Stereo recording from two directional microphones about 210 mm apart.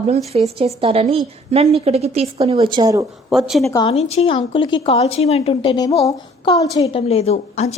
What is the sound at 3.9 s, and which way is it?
A woman's voice, 30° left (ahead or behind).